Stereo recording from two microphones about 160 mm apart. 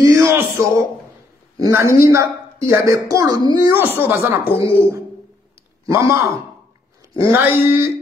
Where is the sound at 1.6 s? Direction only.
15° right (ahead or behind).